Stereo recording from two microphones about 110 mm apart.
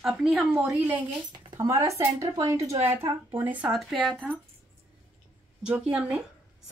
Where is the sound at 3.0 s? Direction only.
15° right (ahead or behind).